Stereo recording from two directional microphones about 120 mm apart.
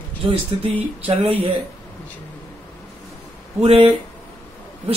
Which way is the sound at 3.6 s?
55° right (ahead or behind).